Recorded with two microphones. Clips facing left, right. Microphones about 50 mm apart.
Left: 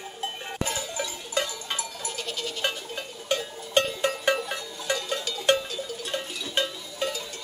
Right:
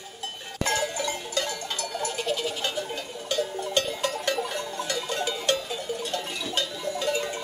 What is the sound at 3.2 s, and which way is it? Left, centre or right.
Music, left.